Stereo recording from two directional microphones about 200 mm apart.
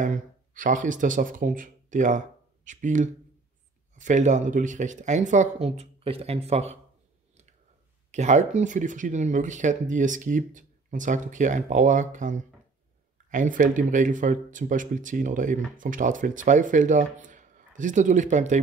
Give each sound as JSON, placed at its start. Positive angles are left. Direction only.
{"t": 0.0, "sound": "speech", "side_deg": -40}
{"t": 8.1, "sound": "speech", "side_deg": -35}